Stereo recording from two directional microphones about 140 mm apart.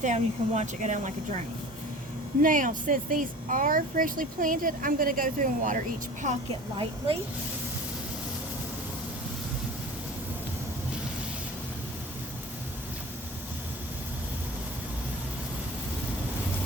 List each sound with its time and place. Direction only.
0.0 s speech: 55° right (ahead or behind)
2.4 s speech: 75° right (ahead or behind)
6.5 s a woman's voice: 40° right (ahead or behind)